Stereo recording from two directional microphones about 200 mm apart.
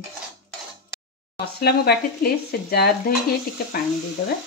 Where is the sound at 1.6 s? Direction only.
50° left (ahead or behind).